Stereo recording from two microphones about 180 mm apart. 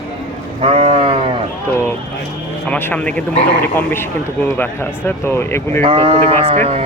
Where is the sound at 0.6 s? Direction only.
30° right (ahead or behind).